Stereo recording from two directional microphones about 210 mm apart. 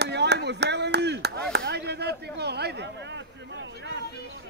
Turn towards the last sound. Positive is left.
turn(degrees=-55)  # may be behind; listen again after turning